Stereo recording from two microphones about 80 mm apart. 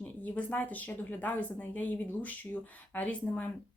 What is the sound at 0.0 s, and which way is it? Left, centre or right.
Speech, centre.